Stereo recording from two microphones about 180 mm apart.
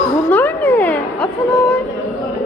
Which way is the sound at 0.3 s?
10° left (ahead or behind).